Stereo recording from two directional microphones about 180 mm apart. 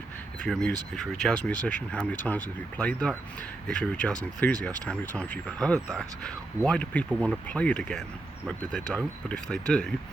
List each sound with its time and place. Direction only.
0.4 s speech: 5° left (ahead or behind)